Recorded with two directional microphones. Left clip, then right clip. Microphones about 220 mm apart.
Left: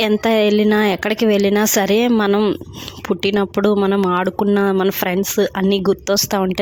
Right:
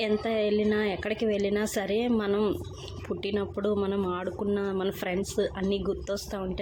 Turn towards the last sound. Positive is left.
turn(degrees=40)  # may be behind; listen again after turning